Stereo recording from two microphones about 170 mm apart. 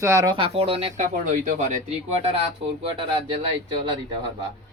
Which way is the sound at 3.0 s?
30° right (ahead or behind).